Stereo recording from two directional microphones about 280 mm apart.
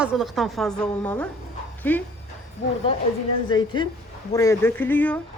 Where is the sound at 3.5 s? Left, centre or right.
Centre.